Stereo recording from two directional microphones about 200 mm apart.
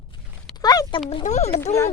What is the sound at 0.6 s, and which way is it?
Speech, 20° left (ahead or behind).